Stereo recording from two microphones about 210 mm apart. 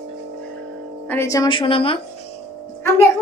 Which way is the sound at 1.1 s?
15° left (ahead or behind).